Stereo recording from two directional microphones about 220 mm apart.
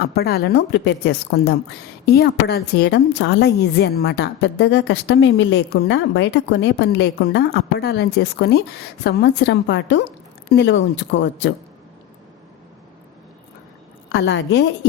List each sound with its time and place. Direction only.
0.0 s a woman's voice: 45° left (ahead or behind)
14.1 s a woman's voice: 50° left (ahead or behind)